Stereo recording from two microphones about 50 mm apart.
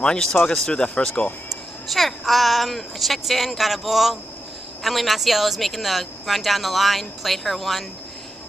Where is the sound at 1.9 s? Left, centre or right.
Centre.